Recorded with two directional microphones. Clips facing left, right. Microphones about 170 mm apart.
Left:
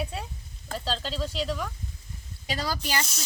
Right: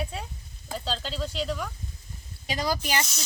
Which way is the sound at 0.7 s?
Centre (ahead or behind).